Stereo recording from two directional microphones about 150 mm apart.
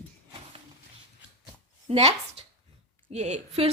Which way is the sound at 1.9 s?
45° right (ahead or behind).